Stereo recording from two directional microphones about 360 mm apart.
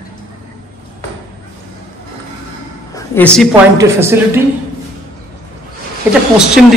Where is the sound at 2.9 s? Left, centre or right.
Centre.